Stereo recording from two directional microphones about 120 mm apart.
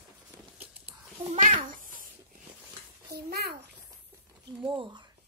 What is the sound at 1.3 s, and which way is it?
Speech, 90° right.